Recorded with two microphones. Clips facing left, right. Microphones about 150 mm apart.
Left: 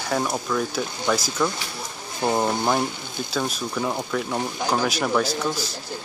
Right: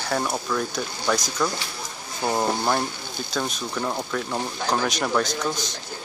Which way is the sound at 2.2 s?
20° left (ahead or behind).